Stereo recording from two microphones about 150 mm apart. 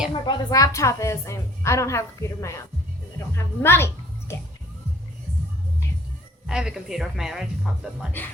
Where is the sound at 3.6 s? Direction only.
15° left (ahead or behind).